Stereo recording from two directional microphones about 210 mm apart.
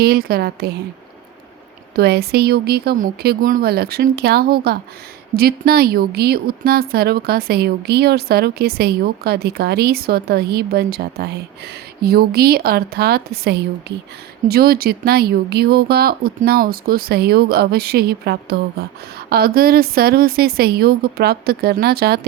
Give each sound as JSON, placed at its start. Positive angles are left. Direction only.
{"t": 0.0, "sound": "a woman's voice", "side_deg": -45}
{"t": 2.0, "sound": "a woman's voice", "side_deg": -50}